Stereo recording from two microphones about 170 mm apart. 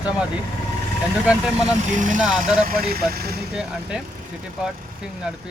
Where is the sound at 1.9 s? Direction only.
50° right (ahead or behind); by 3.4 s 65° right (ahead or behind).